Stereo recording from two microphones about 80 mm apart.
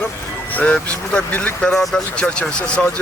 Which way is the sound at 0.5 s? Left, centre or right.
Centre.